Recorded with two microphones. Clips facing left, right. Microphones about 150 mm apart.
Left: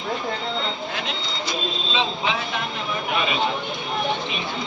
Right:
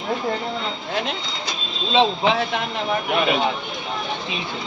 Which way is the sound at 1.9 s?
65° right (ahead or behind).